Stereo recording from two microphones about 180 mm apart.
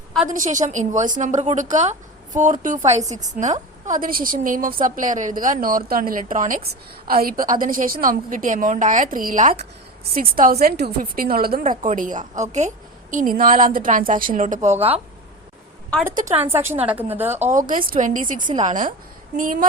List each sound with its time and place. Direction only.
0.3 s a woman's voice: 45° right (ahead or behind)
15.9 s a woman's voice: 5° left (ahead or behind)
16.5 s a woman's voice: 15° right (ahead or behind)
17.5 s a woman's voice: 50° right (ahead or behind)